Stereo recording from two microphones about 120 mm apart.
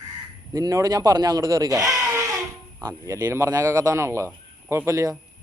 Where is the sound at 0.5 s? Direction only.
25° right (ahead or behind).